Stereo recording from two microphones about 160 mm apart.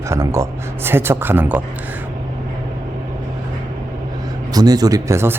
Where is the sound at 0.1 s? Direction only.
20° right (ahead or behind).